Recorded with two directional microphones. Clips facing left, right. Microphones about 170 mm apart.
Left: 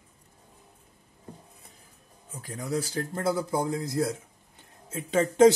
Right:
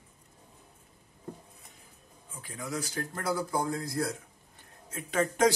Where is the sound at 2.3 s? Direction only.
40° left (ahead or behind).